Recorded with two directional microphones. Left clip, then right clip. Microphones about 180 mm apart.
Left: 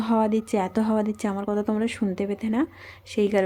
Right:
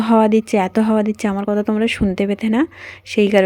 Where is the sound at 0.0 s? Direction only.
30° right (ahead or behind).